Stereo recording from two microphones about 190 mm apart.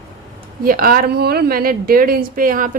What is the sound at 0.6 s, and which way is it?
A woman's voice, 50° right (ahead or behind).